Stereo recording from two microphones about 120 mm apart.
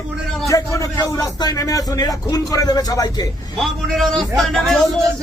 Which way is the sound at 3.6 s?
Centre (ahead or behind).